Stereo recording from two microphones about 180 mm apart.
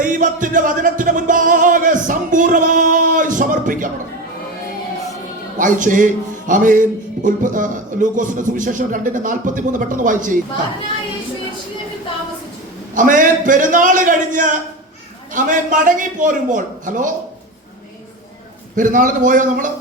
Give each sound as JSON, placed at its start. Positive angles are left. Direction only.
{"t": 0.0, "sound": "music", "side_deg": -45}
{"t": 5.5, "sound": "speech", "side_deg": -45}
{"t": 12.9, "sound": "speech", "side_deg": -45}
{"t": 18.8, "sound": "speech", "side_deg": -45}